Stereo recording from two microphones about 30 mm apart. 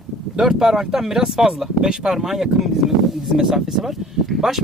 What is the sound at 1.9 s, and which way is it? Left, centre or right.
Speech, right.